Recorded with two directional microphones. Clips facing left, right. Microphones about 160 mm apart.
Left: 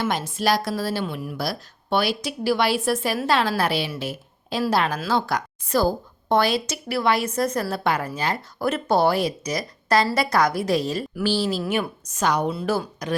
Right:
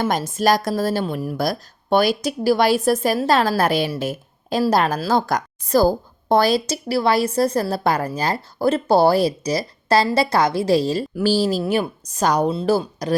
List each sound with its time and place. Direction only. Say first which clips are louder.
0.0 s a woman's voice: right 4 dB; 45° right (ahead or behind)